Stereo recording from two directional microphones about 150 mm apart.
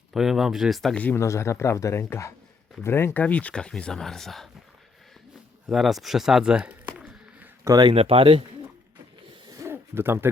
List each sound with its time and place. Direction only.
0.1 s speech: centre (ahead or behind)
5.6 s speech: centre (ahead or behind)
7.6 s speech: 25° right (ahead or behind)
9.3 s hoot: 25° right (ahead or behind)